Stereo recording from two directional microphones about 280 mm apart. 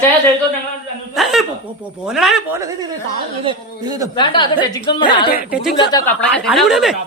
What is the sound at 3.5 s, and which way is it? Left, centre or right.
Speech, centre.